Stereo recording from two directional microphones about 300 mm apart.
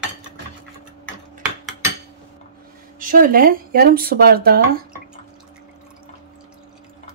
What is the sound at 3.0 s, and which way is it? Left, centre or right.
Speech, right.